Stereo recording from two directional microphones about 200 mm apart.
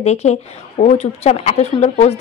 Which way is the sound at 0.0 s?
35° left (ahead or behind).